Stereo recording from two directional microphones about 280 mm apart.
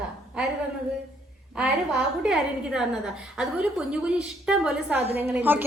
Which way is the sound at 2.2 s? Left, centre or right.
Centre.